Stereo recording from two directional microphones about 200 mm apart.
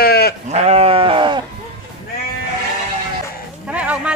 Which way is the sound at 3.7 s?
5° right (ahead or behind).